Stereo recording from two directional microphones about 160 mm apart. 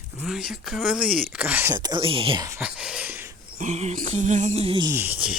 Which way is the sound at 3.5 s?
45° right (ahead or behind).